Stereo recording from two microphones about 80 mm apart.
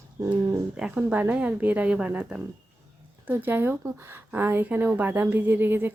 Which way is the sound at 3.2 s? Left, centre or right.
Right.